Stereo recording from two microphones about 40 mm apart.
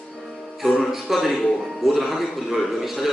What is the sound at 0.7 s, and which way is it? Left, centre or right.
A man's voice, centre.